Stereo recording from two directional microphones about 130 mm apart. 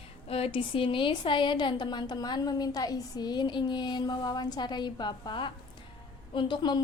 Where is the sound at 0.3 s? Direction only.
50° left (ahead or behind).